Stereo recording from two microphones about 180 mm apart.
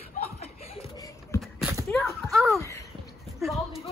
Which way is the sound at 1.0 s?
20° left (ahead or behind).